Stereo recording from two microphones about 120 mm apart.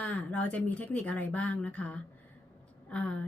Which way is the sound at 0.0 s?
10° left (ahead or behind).